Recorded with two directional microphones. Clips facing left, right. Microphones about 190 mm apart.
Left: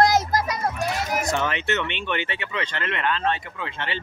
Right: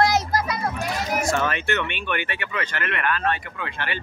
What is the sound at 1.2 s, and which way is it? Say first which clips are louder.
Speech: right 2 dB; 20° left (ahead or behind).